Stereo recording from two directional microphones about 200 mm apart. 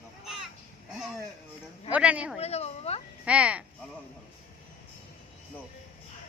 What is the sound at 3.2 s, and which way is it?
Speech, 5° right (ahead or behind).